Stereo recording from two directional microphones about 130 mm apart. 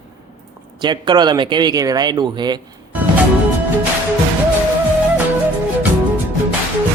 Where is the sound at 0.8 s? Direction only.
35° right (ahead or behind).